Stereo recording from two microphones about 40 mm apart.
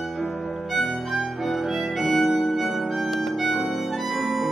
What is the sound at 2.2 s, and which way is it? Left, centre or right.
Music, centre.